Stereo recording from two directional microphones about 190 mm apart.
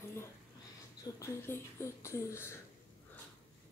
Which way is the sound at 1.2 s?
15° left (ahead or behind).